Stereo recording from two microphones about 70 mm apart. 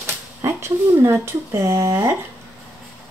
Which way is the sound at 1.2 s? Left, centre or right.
Right.